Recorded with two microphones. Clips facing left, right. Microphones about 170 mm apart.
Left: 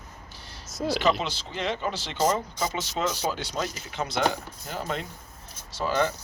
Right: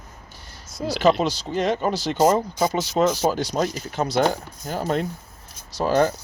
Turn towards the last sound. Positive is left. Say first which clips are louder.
# right 6 dB
turn(degrees=-40)  # may be behind; listen again after turning